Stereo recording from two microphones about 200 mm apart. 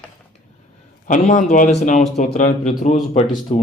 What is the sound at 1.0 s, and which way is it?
Speech, 40° left (ahead or behind).